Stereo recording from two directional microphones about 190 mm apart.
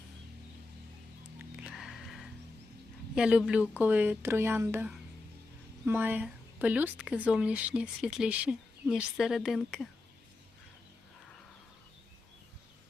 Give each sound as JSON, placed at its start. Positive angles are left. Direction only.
{"t": 1.4, "sound": "music", "side_deg": -5}
{"t": 3.2, "sound": "speech", "side_deg": -5}